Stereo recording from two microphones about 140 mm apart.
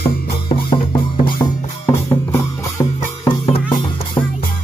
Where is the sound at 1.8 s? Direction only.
20° left (ahead or behind).